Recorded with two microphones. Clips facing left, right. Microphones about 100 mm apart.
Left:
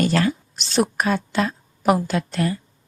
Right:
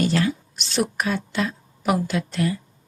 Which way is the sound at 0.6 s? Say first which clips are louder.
Left 4 dB; 35° left (ahead or behind).